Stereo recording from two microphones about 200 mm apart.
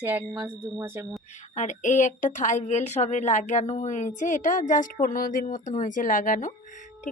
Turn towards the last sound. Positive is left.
turn(degrees=40)  # may be behind; listen again after turning